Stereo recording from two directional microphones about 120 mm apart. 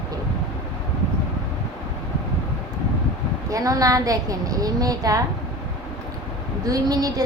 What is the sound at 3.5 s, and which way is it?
A woman's voice, 30° right (ahead or behind).